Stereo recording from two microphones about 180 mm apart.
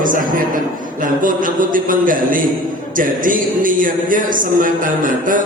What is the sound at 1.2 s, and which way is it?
Speech, 50° right (ahead or behind).